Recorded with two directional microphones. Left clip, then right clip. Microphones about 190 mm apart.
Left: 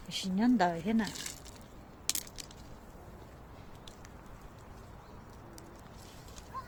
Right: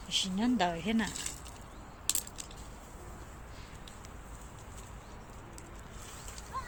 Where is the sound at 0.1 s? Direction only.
25° left (ahead or behind).